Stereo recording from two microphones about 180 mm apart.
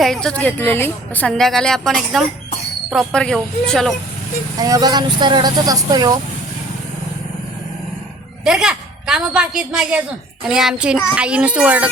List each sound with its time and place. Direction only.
0.0 s a woman's voice: 5° left (ahead or behind)
4.5 s speech: 20° right (ahead or behind)
8.4 s a woman's voice: 5° right (ahead or behind)